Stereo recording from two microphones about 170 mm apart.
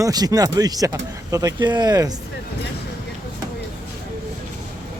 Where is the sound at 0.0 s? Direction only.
20° right (ahead or behind).